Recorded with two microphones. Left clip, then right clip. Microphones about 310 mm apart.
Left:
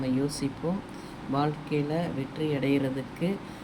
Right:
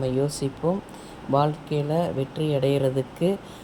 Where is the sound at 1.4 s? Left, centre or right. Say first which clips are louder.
Right 3 dB; centre.